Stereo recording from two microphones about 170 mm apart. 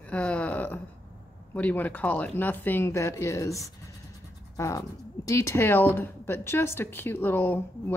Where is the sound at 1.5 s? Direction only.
10° left (ahead or behind).